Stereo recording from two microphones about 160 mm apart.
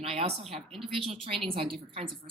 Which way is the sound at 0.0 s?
40° right (ahead or behind).